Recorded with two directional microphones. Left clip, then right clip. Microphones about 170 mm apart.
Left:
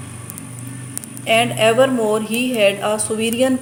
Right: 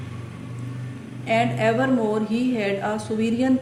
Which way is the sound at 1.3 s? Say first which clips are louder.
Left 6 dB; 30° left (ahead or behind).